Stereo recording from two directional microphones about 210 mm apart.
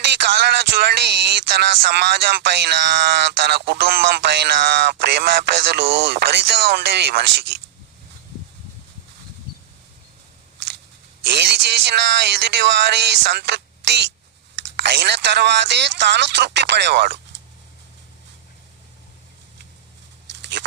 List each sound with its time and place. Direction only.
0.3 s speech: 50° right (ahead or behind)
11.3 s a man's voice: 50° right (ahead or behind)